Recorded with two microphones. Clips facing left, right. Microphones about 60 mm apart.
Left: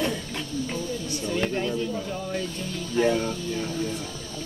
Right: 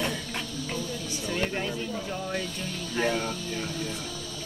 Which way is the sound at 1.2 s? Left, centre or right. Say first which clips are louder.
Left 3 dB; right.